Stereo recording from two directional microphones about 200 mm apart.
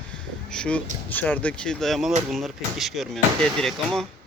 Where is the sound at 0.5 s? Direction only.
5° left (ahead or behind).